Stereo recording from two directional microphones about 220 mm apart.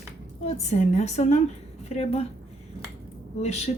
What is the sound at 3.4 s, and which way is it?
Speech, 30° left (ahead or behind).